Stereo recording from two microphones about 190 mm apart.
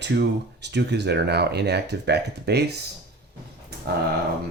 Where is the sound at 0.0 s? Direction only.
65° right (ahead or behind).